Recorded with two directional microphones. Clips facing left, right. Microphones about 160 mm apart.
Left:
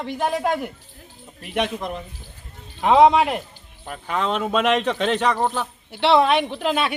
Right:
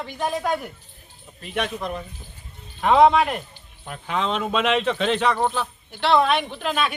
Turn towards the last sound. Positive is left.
turn(degrees=25)  # may be behind; listen again after turning